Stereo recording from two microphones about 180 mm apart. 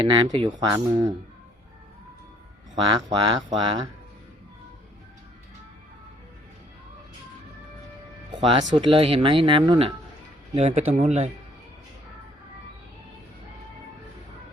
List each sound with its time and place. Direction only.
0.0 s speech: 30° right (ahead or behind)
2.7 s speech: 20° right (ahead or behind)
8.4 s speech: 25° right (ahead or behind)
10.9 s speech: 40° right (ahead or behind)